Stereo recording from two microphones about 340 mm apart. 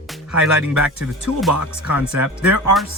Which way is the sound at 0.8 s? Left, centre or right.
Centre.